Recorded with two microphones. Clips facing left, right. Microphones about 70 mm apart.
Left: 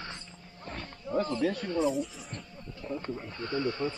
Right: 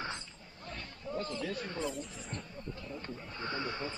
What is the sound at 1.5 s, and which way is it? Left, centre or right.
Speech, right.